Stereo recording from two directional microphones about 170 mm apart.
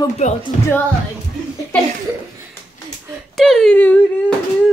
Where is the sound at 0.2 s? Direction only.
50° left (ahead or behind).